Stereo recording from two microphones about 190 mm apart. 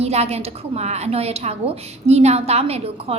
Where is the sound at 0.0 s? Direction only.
35° right (ahead or behind).